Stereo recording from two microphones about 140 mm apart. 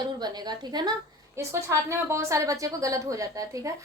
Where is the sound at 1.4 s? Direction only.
20° right (ahead or behind).